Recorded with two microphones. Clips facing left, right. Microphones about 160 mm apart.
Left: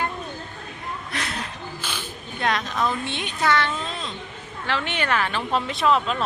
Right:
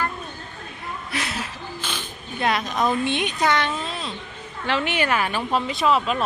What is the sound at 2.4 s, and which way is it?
Speech, 10° right (ahead or behind).